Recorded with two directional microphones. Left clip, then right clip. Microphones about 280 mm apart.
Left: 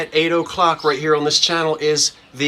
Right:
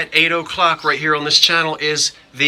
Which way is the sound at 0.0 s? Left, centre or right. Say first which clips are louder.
Right 2 dB; centre.